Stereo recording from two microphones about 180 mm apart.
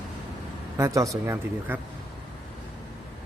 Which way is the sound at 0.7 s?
15° right (ahead or behind).